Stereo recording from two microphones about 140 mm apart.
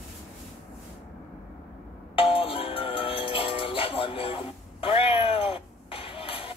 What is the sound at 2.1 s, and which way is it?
Music, 40° left (ahead or behind).